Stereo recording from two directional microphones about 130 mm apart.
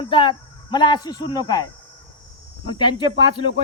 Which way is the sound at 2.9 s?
35° left (ahead or behind).